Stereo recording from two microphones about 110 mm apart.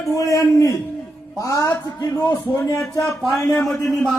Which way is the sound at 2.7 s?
10° left (ahead or behind).